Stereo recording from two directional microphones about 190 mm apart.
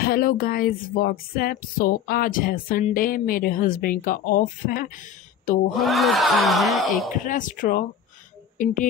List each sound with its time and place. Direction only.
0.0 s speech: 50° left (ahead or behind)
5.7 s speech: centre (ahead or behind)
7.2 s speech: 45° left (ahead or behind)